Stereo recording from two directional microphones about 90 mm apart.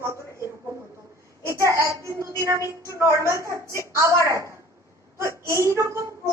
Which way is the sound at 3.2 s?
30° right (ahead or behind).